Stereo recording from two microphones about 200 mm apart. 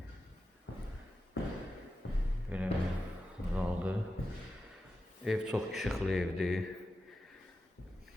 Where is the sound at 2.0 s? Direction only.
65° left (ahead or behind).